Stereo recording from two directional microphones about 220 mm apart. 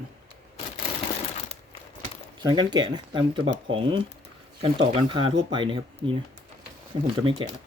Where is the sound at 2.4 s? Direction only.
20° right (ahead or behind).